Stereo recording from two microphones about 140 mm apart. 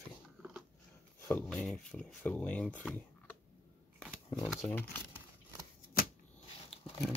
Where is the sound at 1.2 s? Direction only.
10° left (ahead or behind).